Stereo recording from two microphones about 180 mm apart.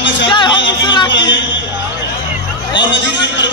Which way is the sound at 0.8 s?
25° left (ahead or behind).